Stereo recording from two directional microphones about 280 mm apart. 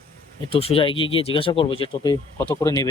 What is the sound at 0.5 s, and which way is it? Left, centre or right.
Speech, centre.